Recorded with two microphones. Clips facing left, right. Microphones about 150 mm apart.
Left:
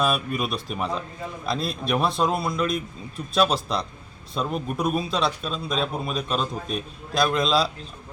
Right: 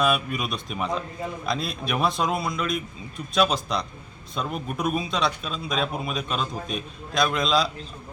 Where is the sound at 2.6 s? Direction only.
35° left (ahead or behind).